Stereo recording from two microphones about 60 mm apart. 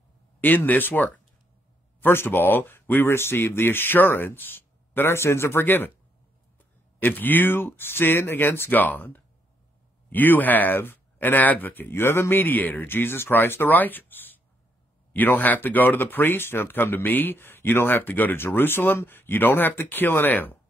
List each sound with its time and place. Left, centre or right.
0.4 s speech: left
7.0 s speech: left